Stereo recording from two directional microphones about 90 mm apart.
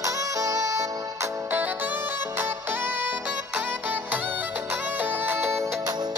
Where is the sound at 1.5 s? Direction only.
20° right (ahead or behind).